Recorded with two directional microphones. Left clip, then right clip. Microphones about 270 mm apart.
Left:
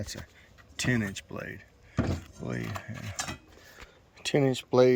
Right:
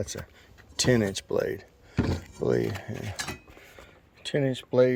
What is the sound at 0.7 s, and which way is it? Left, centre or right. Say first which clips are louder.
Speech: right 6 dB; right.